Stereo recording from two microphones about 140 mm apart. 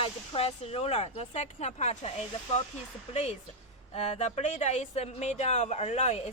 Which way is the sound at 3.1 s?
55° left (ahead or behind).